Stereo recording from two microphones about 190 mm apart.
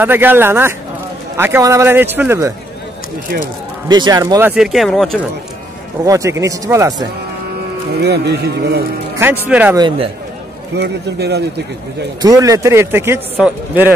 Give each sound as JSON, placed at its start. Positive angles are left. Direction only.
{"t": 0.0, "sound": "a man's voice", "side_deg": -10}
{"t": 3.9, "sound": "a man's voice", "side_deg": -20}
{"t": 6.0, "sound": "a man's voice", "side_deg": -15}
{"t": 8.0, "sound": "speech", "side_deg": -60}
{"t": 9.2, "sound": "a man's voice", "side_deg": -10}
{"t": 9.8, "sound": "speech", "side_deg": -25}
{"t": 10.8, "sound": "speech", "side_deg": -60}
{"t": 12.2, "sound": "a man's voice", "side_deg": -20}